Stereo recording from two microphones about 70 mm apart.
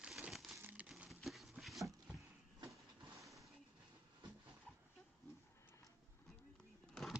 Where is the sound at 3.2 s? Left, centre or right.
Centre.